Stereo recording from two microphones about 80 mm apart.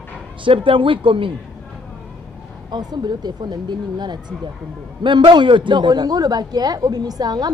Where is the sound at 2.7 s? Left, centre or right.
Right.